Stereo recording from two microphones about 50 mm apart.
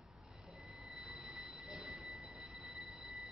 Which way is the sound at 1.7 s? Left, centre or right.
Centre.